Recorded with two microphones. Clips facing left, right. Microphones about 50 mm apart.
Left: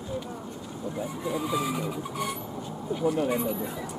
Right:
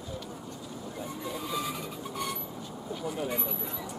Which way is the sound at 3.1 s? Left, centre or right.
Centre.